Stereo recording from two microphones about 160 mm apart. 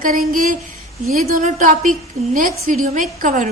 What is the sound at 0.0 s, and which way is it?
A woman's voice, 60° right (ahead or behind).